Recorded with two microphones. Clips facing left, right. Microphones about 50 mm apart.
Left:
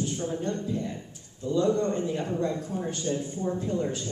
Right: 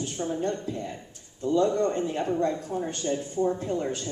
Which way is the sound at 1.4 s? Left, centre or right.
Right.